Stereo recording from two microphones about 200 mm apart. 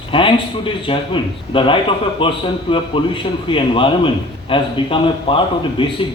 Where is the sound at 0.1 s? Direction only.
25° left (ahead or behind).